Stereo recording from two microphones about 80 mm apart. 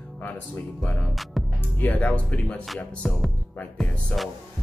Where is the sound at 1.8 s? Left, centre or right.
Left.